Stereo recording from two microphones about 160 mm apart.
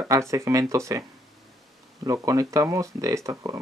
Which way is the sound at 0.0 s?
20° right (ahead or behind).